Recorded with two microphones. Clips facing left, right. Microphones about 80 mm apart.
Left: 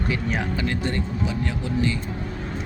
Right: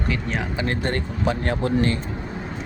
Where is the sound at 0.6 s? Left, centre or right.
Right.